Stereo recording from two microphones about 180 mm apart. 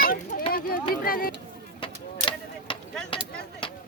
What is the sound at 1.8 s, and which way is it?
Vehicle, 25° left (ahead or behind).